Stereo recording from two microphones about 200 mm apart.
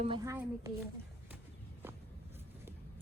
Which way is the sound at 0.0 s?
25° right (ahead or behind).